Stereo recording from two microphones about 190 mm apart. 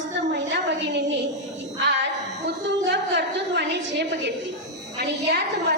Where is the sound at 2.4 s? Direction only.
65° right (ahead or behind).